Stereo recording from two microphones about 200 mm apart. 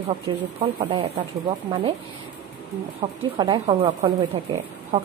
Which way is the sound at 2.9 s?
25° right (ahead or behind).